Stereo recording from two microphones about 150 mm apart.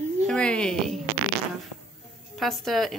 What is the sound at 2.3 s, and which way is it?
Speech, centre (ahead or behind).